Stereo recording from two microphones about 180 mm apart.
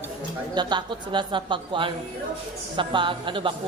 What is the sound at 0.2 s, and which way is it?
Speech, 25° right (ahead or behind).